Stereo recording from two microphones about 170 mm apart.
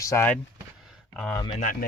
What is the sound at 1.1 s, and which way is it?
Speech, 5° left (ahead or behind).